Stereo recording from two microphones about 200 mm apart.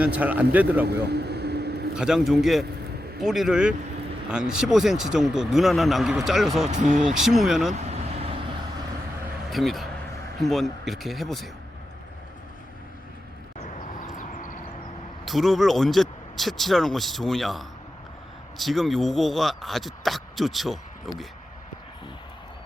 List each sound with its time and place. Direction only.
0.0 s speech: 10° right (ahead or behind)
1.1 s vehicle: 55° right (ahead or behind)
2.0 s speech: 5° right (ahead or behind)
6.7 s speech: 35° right (ahead or behind)
6.9 s speech: 5° right (ahead or behind)
7.7 s vehicle: 35° right (ahead or behind)
9.5 s speech: centre (ahead or behind)
14.0 s vehicle: 40° left (ahead or behind)
15.2 s speech: centre (ahead or behind)